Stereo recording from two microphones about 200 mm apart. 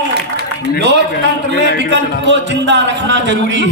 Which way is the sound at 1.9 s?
60° right (ahead or behind).